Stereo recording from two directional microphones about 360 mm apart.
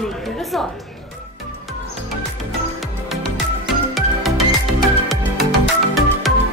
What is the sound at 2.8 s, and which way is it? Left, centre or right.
Music, centre.